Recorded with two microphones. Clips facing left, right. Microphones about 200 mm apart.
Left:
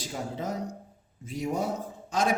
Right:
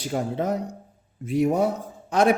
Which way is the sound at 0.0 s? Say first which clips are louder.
Right 8 dB; 60° right (ahead or behind).